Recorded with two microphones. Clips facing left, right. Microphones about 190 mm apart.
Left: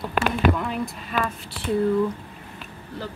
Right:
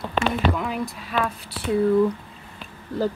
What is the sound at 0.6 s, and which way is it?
Speech, centre (ahead or behind).